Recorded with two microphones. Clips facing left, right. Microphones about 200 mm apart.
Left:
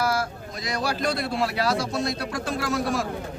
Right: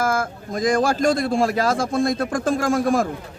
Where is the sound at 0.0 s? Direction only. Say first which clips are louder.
Right 3 dB; 50° right (ahead or behind).